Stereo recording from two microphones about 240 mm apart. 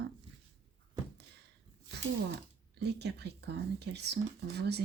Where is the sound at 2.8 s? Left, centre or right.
Right.